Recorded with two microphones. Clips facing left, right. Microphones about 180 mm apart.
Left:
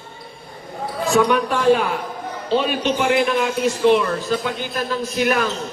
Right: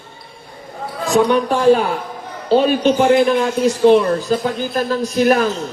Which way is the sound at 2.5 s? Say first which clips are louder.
Right 6 dB; 40° right (ahead or behind).